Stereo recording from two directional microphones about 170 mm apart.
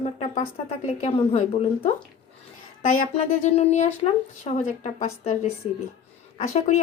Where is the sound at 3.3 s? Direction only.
40° left (ahead or behind).